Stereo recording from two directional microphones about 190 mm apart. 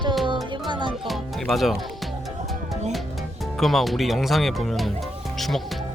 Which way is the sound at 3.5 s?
Centre (ahead or behind).